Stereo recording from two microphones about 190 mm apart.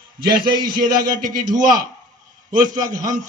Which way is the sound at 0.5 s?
25° right (ahead or behind).